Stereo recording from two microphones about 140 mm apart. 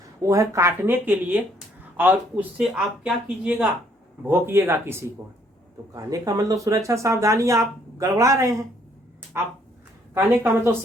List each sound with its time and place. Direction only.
0.2 s speech: 20° right (ahead or behind)